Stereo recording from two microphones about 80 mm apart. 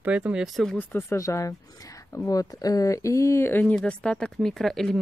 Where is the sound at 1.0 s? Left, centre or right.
Left.